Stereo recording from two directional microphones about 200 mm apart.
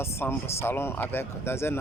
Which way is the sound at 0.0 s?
10° left (ahead or behind).